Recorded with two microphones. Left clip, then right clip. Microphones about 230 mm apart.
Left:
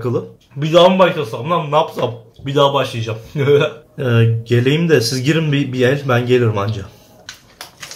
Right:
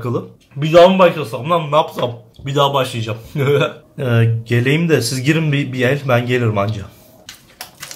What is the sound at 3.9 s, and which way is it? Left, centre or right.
A man's voice, centre.